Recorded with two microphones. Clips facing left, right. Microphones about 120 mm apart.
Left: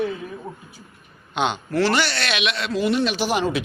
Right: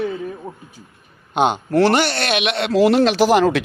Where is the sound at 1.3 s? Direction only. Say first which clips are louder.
Right 6 dB; 50° right (ahead or behind).